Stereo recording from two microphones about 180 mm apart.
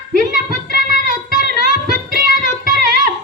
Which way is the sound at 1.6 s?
50° right (ahead or behind).